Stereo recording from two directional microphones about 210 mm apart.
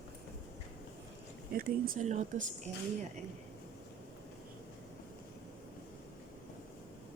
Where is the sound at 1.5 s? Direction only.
45° right (ahead or behind).